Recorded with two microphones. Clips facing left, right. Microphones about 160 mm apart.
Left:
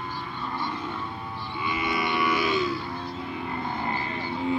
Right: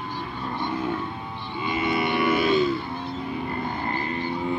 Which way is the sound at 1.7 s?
25° right (ahead or behind).